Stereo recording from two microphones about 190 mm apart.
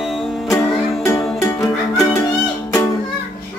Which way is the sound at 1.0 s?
15° left (ahead or behind).